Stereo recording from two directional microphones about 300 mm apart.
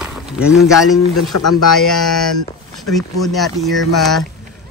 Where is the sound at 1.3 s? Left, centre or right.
Left.